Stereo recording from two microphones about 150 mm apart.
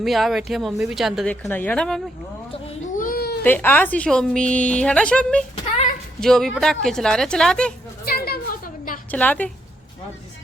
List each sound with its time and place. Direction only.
0.0 s a woman's voice: centre (ahead or behind)
1.3 s speech: 10° left (ahead or behind)
2.5 s a sound: 40° left (ahead or behind)
2.9 s baby cry: 70° left (ahead or behind); by 3.4 s 90° left
3.4 s a woman's voice: 10° left (ahead or behind)
8.0 s a sound: 90° left; by 9.0 s 70° left (ahead or behind)
9.0 s a woman's voice: 10° left (ahead or behind)